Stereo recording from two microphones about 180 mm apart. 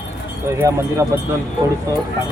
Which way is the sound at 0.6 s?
15° right (ahead or behind).